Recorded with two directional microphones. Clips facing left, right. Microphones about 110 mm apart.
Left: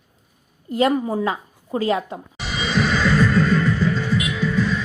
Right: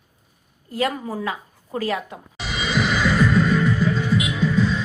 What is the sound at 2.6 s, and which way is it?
Music, 10° right (ahead or behind).